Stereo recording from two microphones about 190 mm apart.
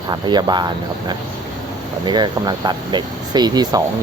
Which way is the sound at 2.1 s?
25° right (ahead or behind).